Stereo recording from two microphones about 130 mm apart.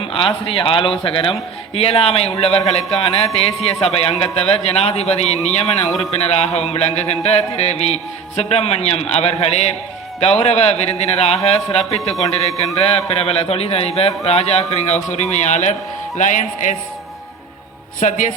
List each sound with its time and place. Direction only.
0.0 s a man's voice: 45° left (ahead or behind)
6.0 s a sound: 55° left (ahead or behind)
10.2 s a man's voice: 50° left (ahead or behind)
14.3 s a sound: 55° left (ahead or behind)
16.1 s speech: 70° left (ahead or behind)
18.0 s speech: 70° left (ahead or behind)